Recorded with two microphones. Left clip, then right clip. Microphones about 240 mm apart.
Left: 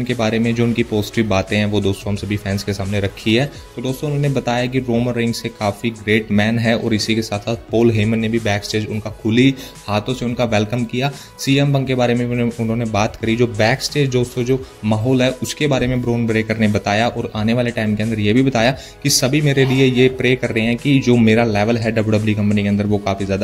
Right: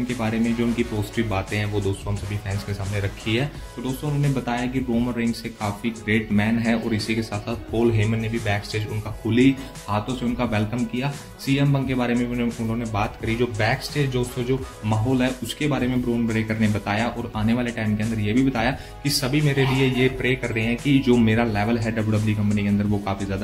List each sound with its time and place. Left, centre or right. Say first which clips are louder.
0.5 s speech: left 6 dB; left